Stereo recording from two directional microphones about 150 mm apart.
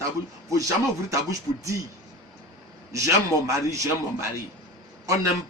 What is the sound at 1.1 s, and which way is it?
Speech, 20° right (ahead or behind).